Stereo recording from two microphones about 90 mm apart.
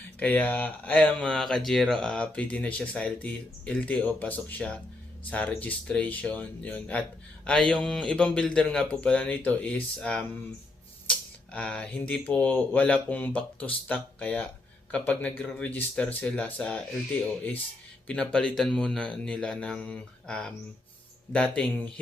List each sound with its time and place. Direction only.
0.2 s speech: 20° left (ahead or behind)
18.1 s speech: 10° left (ahead or behind)